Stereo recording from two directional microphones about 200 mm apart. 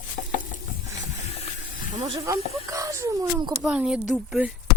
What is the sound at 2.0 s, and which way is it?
Speech, 25° right (ahead or behind).